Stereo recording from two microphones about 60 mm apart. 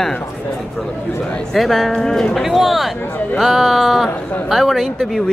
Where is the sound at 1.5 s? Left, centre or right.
Centre.